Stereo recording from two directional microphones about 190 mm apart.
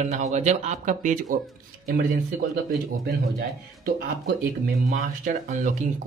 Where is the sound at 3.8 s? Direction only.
50° right (ahead or behind).